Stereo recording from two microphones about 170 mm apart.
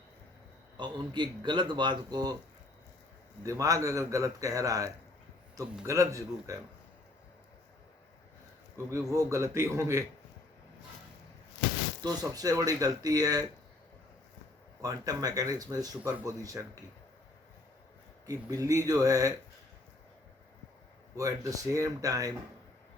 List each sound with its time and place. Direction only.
0.8 s speech: 25° right (ahead or behind)
3.4 s a man's voice: 20° right (ahead or behind)
8.9 s a man's voice: 15° right (ahead or behind)
12.0 s speech: 20° right (ahead or behind)
14.8 s speech: 20° right (ahead or behind)
18.3 s speech: 20° right (ahead or behind)
21.2 s speech: 20° right (ahead or behind)